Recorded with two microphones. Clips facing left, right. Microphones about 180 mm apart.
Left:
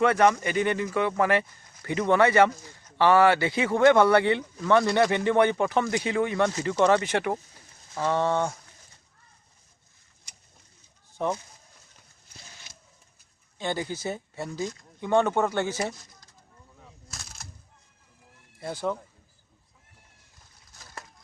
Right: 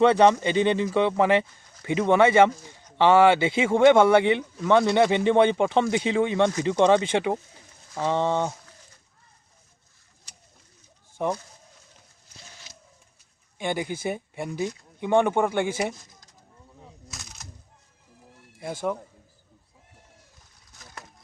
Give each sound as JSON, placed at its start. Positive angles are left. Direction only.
{"t": 0.0, "sound": "speech", "side_deg": -25}
{"t": 11.2, "sound": "speech", "side_deg": -10}
{"t": 13.6, "sound": "speech", "side_deg": -15}
{"t": 17.1, "sound": "a sound", "side_deg": 0}
{"t": 18.6, "sound": "speech", "side_deg": -10}